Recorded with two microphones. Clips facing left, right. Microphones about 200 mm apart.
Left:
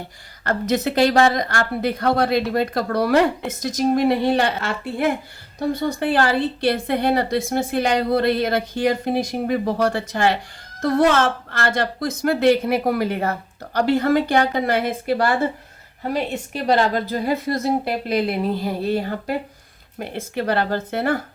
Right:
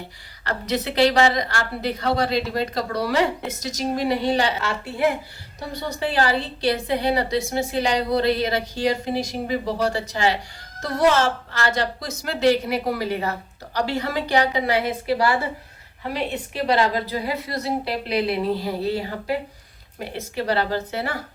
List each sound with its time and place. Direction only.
0.4 s a woman's voice: 50° left (ahead or behind)